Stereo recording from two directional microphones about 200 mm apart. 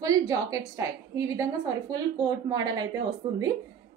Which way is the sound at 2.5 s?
20° right (ahead or behind).